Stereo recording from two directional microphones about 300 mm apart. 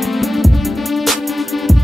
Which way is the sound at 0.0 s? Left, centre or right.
Centre.